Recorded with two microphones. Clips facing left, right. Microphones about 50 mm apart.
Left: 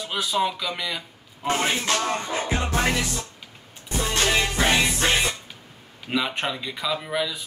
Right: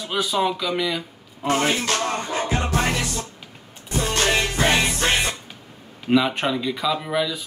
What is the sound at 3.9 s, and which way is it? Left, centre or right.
Music, right.